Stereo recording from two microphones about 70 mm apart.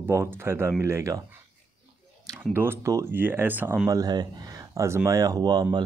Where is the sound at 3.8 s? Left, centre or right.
Right.